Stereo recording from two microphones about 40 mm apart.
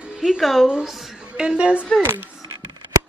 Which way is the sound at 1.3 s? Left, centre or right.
Right.